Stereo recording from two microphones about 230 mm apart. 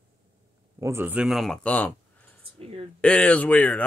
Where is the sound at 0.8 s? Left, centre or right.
Centre.